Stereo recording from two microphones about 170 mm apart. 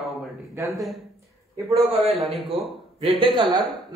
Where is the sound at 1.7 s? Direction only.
35° right (ahead or behind).